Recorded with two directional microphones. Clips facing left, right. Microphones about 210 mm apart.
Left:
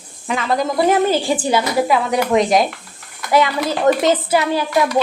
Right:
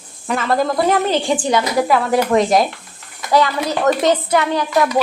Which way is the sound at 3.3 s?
20° left (ahead or behind).